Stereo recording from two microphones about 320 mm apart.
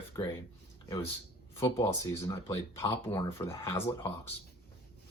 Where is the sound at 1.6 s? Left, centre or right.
Centre.